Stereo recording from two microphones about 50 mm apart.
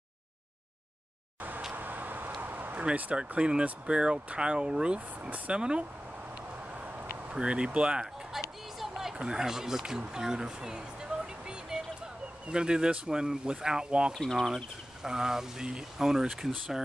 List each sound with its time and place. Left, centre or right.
1.7 s vehicle: right
2.4 s a sound: right
2.8 s speech: right
6.7 s a sound: right
7.2 s speech: centre
8.3 s music: centre
8.7 s a sound: centre
9.1 s speech: centre
14.1 s speech: centre
15.0 s speech: centre